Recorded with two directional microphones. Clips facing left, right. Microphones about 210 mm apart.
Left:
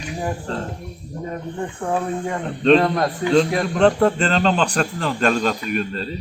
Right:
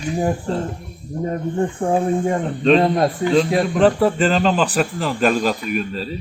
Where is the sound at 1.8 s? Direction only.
25° right (ahead or behind).